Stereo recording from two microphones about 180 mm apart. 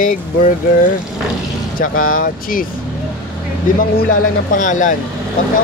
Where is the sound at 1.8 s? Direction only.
50° left (ahead or behind).